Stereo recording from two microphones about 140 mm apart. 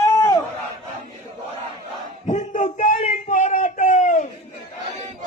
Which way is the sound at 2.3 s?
55° left (ahead or behind).